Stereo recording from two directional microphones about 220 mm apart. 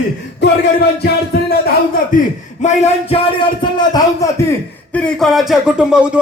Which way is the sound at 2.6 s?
30° left (ahead or behind).